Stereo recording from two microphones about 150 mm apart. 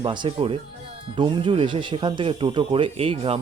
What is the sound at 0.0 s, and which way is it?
Speech, 35° right (ahead or behind).